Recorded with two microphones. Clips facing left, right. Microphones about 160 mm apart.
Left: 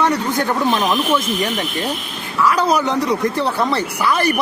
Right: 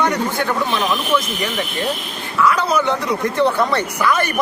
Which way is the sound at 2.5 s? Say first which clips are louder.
Left 2 dB; 40° left (ahead or behind).